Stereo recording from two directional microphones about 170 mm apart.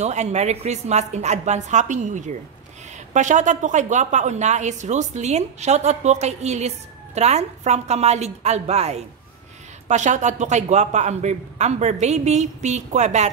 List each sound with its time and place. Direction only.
0.0 s a woman's voice: 40° right (ahead or behind)